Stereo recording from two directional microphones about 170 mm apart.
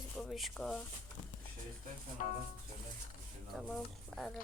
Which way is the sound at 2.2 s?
45° left (ahead or behind).